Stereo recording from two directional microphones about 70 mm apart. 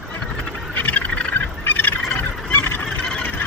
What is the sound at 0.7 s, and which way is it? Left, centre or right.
Fowl, left.